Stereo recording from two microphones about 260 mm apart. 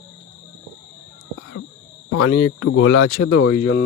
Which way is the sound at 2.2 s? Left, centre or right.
Left.